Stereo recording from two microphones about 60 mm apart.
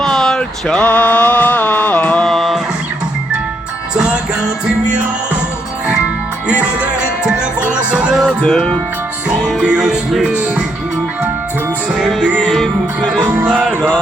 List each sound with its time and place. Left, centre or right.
0.0 s a sound: centre
1.5 s music: left
2.2 s music: centre
3.9 s music: centre
6.5 s music: right
8.1 s music: centre
8.4 s music: centre
9.6 s music: centre
12.0 s music: centre
13.2 s music: right
13.5 s music: right